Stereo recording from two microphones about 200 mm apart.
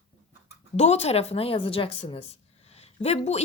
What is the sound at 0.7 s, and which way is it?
A woman's voice, 35° left (ahead or behind).